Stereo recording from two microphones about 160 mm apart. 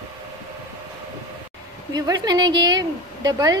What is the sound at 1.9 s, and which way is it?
Speech, 25° right (ahead or behind).